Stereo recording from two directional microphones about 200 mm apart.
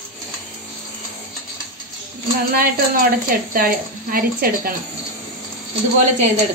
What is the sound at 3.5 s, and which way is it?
Speech, 45° right (ahead or behind).